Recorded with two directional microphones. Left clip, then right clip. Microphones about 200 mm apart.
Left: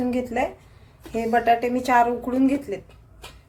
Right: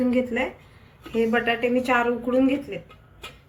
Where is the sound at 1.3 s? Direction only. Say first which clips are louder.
Left 6 dB; 40° left (ahead or behind).